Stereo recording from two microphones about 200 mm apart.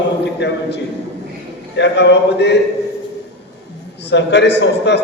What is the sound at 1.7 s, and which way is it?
Speech, 60° left (ahead or behind).